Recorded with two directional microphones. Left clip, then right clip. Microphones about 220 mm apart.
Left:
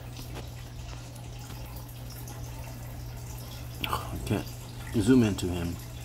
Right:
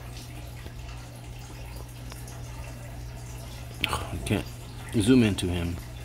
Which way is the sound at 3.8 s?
40° right (ahead or behind).